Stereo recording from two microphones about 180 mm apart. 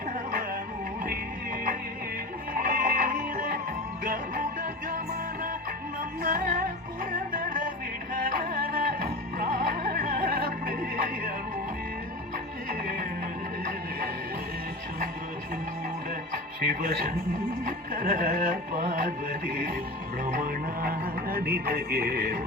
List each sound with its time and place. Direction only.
2.6 s music: 50° right (ahead or behind)
6.2 s music: 50° right (ahead or behind)
16.6 s speech: 55° right (ahead or behind)
17.7 s music: 50° right (ahead or behind)
20.2 s a man's voice: 50° right (ahead or behind)